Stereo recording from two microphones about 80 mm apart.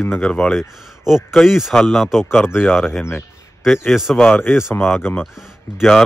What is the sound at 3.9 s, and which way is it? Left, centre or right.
Speech, centre.